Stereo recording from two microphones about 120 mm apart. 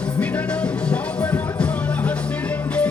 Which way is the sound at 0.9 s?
10° left (ahead or behind).